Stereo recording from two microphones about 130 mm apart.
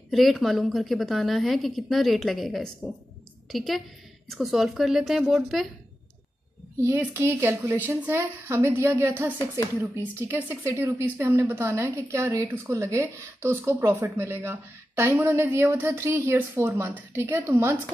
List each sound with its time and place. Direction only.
0.1 s a woman's voice: centre (ahead or behind)
6.8 s speech: 20° right (ahead or behind)